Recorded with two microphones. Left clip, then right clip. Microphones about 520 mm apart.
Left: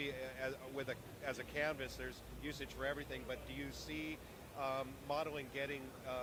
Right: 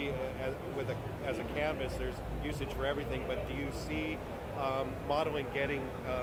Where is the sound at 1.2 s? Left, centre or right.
Left.